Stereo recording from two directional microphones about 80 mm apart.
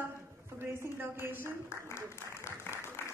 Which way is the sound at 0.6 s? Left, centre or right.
Right.